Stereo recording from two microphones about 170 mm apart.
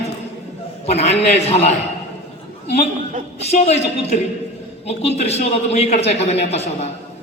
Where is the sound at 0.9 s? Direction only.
40° left (ahead or behind).